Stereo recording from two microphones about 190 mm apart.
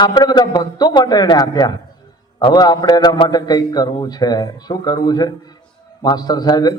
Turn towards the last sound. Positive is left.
turn(degrees=20)  # may be behind; listen again after turning